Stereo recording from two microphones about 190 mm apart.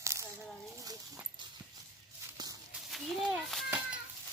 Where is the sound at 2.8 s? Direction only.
Centre (ahead or behind).